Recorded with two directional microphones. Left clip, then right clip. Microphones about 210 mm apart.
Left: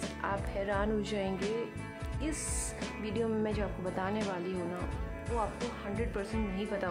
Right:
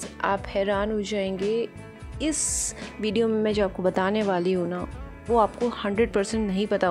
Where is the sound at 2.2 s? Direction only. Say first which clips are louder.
Right 11 dB; 30° right (ahead or behind).